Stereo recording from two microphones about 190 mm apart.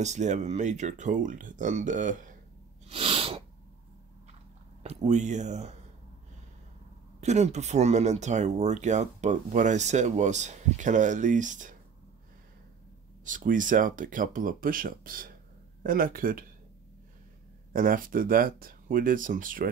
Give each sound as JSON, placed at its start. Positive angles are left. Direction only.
{"t": 0.0, "sound": "speech", "side_deg": -40}
{"t": 2.9, "sound": "sneeze", "side_deg": -30}
{"t": 4.8, "sound": "speech", "side_deg": -35}
{"t": 7.2, "sound": "speech", "side_deg": -35}
{"t": 13.2, "sound": "speech", "side_deg": -45}
{"t": 17.7, "sound": "speech", "side_deg": -45}